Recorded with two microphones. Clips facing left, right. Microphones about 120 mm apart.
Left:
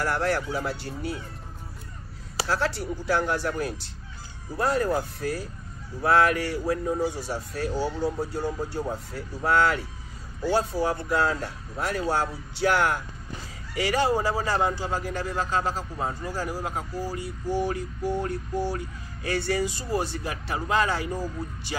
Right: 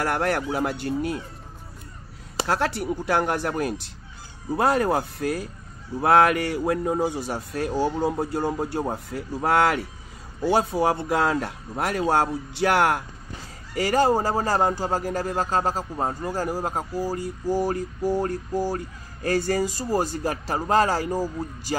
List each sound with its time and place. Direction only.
0.0 s speech: 60° right (ahead or behind)
2.4 s speech: 55° right (ahead or behind)
13.7 s speech: 45° right (ahead or behind)